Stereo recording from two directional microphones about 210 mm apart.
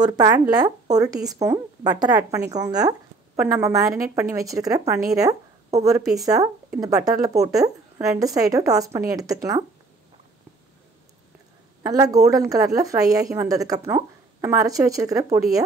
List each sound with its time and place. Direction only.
0.0 s a woman's voice: 20° right (ahead or behind)
5.3 s a sound: 30° right (ahead or behind)
5.9 s a woman's voice: 15° right (ahead or behind)
11.8 s a woman's voice: 15° right (ahead or behind)